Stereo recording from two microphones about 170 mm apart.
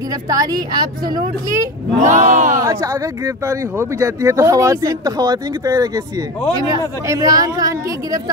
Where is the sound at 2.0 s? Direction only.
45° right (ahead or behind).